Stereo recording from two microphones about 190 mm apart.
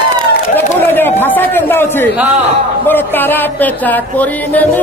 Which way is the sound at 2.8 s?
10° left (ahead or behind).